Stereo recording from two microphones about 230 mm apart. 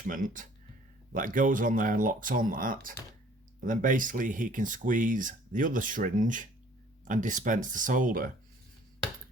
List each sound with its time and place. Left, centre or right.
0.1 s speech: right